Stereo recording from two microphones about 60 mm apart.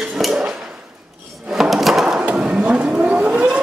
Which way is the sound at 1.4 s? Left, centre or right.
Centre.